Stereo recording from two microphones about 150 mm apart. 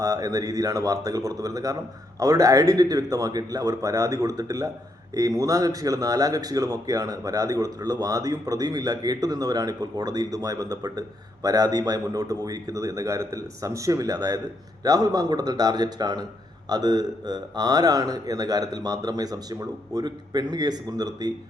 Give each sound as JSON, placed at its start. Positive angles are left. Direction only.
{"t": 0.0, "sound": "speech", "side_deg": -25}